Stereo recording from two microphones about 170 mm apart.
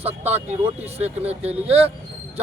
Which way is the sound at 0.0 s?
35° right (ahead or behind).